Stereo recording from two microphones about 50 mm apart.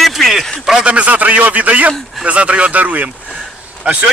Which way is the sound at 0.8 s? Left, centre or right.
Right.